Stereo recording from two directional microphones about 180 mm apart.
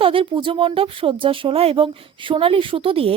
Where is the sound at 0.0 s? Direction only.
30° right (ahead or behind).